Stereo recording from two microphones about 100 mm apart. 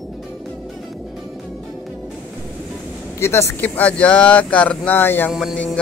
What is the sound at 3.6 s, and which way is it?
Speech, 15° left (ahead or behind).